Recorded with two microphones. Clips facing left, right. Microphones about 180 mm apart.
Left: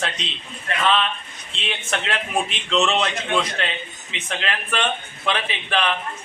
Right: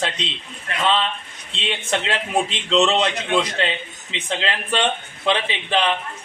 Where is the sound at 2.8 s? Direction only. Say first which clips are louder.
Right 3 dB; 20° right (ahead or behind).